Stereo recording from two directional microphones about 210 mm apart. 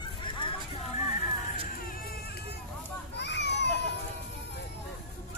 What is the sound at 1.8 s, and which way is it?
Music, 45° left (ahead or behind).